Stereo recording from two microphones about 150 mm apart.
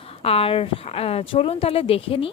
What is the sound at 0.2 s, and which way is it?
Speech, 40° left (ahead or behind).